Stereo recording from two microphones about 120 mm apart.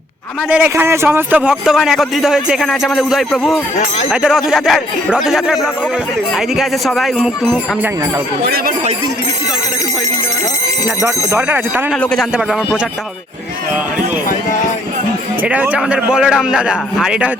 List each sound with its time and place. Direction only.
0.5 s a man's voice: 20° right (ahead or behind); by 7.6 s centre (ahead or behind)
11.0 s a man's voice: 20° right (ahead or behind)
12.1 s a man's voice: centre (ahead or behind)
15.4 s a man's voice: 10° right (ahead or behind)